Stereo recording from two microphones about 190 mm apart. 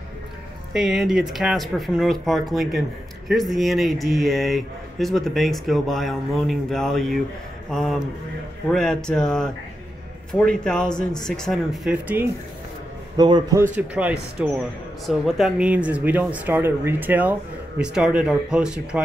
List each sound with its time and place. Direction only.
0.7 s speech: centre (ahead or behind)
13.1 s a man's voice: 20° right (ahead or behind)
13.7 s speech: 5° right (ahead or behind)